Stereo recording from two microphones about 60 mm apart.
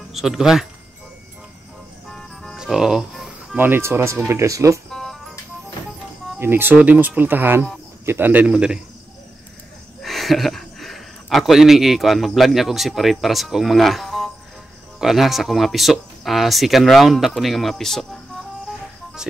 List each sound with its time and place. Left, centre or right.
0.1 s speech: centre
2.0 s music: centre
2.5 s music: centre
3.5 s speech: right
3.8 s speech: right
4.9 s music: centre
6.4 s speech: right; by 8.7 s centre
10.0 s speech: centre